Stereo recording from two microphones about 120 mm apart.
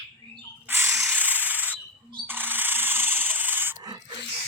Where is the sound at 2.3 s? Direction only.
15° right (ahead or behind).